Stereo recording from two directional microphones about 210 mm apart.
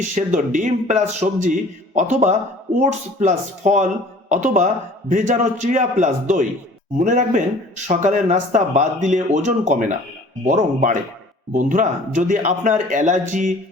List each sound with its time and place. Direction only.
0.0 s a man's voice: 35° right (ahead or behind)